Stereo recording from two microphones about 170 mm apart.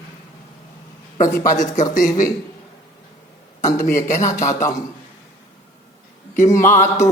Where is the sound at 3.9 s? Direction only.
50° left (ahead or behind).